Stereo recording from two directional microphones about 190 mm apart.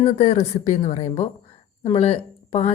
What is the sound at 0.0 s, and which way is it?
A woman's voice, 35° left (ahead or behind).